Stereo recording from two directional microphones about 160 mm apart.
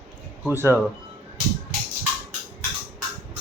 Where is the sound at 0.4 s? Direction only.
15° right (ahead or behind).